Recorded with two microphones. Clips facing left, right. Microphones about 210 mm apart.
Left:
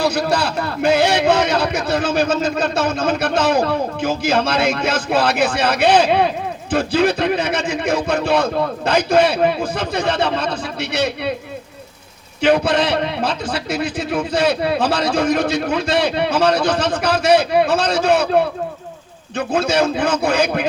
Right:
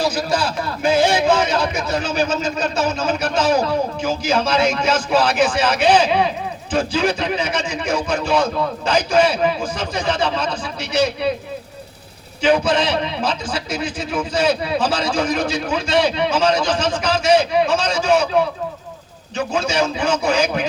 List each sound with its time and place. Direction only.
0.0 s a man's voice: 65° left (ahead or behind)
12.4 s a man's voice: 60° left (ahead or behind)